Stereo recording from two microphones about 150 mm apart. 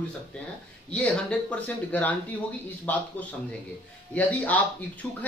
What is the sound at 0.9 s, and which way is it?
Speech, 10° left (ahead or behind).